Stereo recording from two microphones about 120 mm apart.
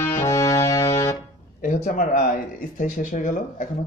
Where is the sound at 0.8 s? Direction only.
55° left (ahead or behind).